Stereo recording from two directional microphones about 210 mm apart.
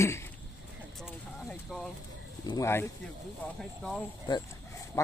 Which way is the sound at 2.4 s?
15° left (ahead or behind).